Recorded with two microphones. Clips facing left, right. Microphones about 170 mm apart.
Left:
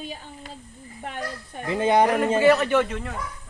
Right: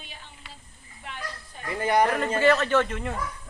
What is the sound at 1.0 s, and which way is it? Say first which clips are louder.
Speech: left 6 dB; 50° left (ahead or behind).